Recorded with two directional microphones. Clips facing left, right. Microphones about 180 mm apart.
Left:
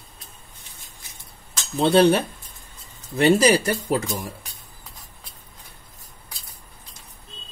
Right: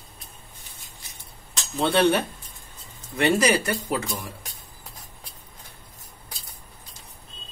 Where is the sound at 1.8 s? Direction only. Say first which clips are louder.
Left 4 dB; 30° left (ahead or behind).